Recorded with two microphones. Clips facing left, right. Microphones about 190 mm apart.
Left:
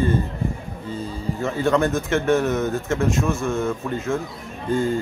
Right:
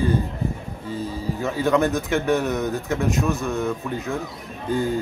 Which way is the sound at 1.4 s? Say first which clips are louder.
Even; 5° right (ahead or behind).